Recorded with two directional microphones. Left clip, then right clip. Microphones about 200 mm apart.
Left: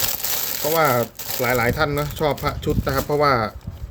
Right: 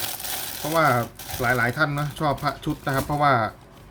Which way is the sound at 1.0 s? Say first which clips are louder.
Left 5 dB; 55° left (ahead or behind).